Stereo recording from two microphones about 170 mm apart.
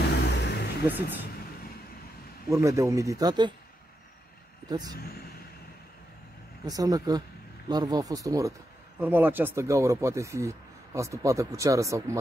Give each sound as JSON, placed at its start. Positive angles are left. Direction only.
{"t": 0.2, "sound": "vehicle", "side_deg": 85}
{"t": 0.8, "sound": "speech", "side_deg": -10}
{"t": 2.5, "sound": "speech", "side_deg": -20}
{"t": 4.6, "sound": "speech", "side_deg": -25}
{"t": 6.6, "sound": "speech", "side_deg": -20}